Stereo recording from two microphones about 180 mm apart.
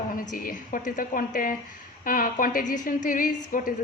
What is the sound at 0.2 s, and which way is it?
A woman's voice, 50° left (ahead or behind).